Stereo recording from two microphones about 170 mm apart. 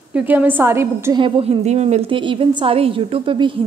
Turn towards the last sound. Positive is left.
turn(degrees=-30)  # may be behind; listen again after turning